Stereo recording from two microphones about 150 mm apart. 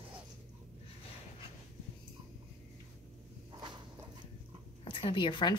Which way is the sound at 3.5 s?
30° right (ahead or behind).